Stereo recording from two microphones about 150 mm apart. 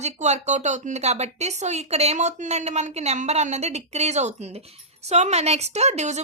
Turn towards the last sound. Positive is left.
turn(degrees=-50)  # may be behind; listen again after turning